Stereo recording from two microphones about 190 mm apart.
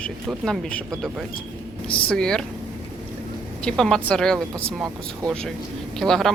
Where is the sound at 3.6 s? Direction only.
5° left (ahead or behind).